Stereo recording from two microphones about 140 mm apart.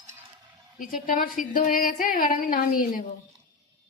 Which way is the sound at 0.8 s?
85° left.